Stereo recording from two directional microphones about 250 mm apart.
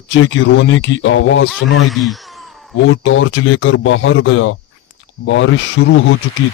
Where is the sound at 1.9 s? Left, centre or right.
Centre.